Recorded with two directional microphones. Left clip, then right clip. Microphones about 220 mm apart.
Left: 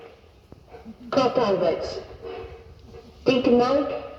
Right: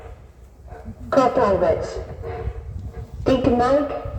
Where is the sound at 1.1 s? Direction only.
45° right (ahead or behind).